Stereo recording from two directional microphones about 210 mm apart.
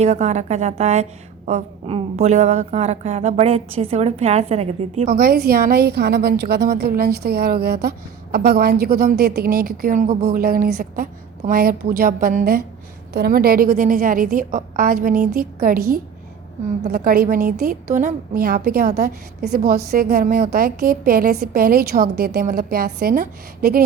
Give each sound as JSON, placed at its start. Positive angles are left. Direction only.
{"t": 0.0, "sound": "a woman's voice", "side_deg": -30}
{"t": 5.1, "sound": "a woman's voice", "side_deg": -45}
{"t": 16.9, "sound": "a woman's voice", "side_deg": -45}